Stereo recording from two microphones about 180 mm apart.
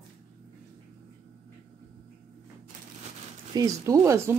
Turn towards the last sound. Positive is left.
turn(degrees=-15)  # may be behind; listen again after turning